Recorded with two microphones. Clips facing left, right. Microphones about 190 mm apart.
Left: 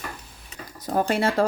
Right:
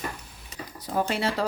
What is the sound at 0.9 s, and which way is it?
Speech, 50° left (ahead or behind).